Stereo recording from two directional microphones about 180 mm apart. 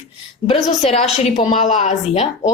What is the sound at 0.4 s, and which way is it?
A woman's voice, 35° left (ahead or behind).